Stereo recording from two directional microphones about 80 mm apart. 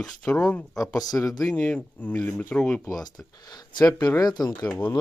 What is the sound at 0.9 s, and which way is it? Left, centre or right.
Speech, left.